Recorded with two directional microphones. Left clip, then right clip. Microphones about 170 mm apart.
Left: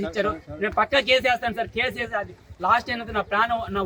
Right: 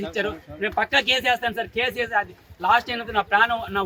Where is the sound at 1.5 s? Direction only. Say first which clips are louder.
Right 1 dB; 35° left (ahead or behind).